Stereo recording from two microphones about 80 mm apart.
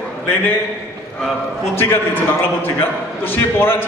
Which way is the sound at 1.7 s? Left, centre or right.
Left.